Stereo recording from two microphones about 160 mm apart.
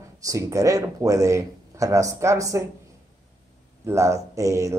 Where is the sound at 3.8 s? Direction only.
20° right (ahead or behind).